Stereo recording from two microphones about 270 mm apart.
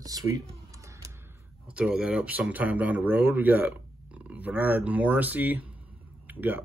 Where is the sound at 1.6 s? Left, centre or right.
Centre.